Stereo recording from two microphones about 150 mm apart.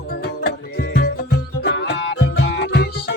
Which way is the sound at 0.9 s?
90° left.